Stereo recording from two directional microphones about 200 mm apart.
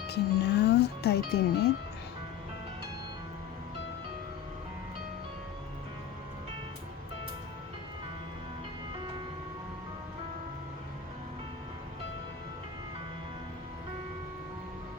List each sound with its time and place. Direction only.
0.1 s speech: 55° left (ahead or behind)